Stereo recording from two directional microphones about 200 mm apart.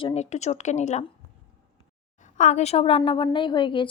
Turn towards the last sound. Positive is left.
turn(degrees=25)  # may be behind; listen again after turning